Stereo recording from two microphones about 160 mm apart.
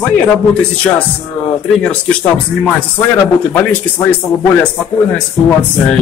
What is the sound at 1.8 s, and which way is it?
Speech, 5° left (ahead or behind).